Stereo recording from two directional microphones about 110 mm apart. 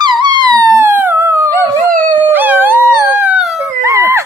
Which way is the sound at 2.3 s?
15° right (ahead or behind).